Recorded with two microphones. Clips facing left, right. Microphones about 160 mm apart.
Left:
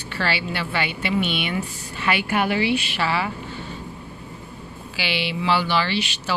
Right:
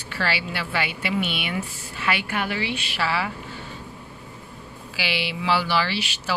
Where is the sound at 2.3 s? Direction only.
15° left (ahead or behind).